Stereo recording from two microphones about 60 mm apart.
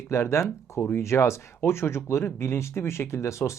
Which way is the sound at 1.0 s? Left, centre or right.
Left.